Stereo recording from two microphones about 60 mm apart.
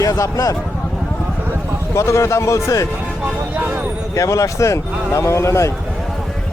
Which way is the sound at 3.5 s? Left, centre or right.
Centre.